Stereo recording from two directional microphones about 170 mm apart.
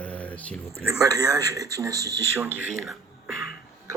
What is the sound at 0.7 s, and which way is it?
Speech, 15° right (ahead or behind).